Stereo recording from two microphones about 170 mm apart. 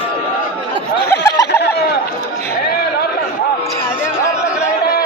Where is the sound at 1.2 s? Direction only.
20° left (ahead or behind).